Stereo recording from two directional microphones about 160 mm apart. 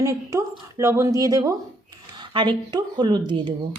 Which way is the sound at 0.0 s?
20° right (ahead or behind).